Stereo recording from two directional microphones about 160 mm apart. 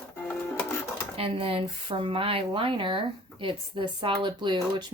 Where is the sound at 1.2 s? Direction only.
35° right (ahead or behind).